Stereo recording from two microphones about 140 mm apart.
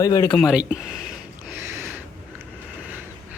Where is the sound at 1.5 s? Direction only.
15° right (ahead or behind).